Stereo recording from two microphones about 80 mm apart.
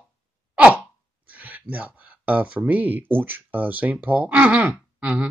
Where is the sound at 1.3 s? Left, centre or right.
Centre.